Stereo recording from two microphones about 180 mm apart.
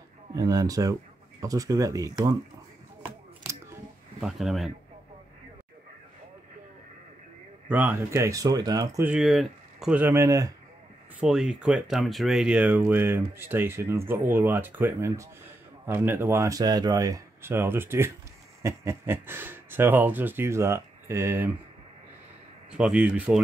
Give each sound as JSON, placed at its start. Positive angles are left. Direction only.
{"t": 0.3, "sound": "speech", "side_deg": -20}
{"t": 4.2, "sound": "speech", "side_deg": 0}
{"t": 7.7, "sound": "a man's voice", "side_deg": -10}
{"t": 9.0, "sound": "a man's voice", "side_deg": -5}
{"t": 11.1, "sound": "a man's voice", "side_deg": -5}
{"t": 22.7, "sound": "speech", "side_deg": -5}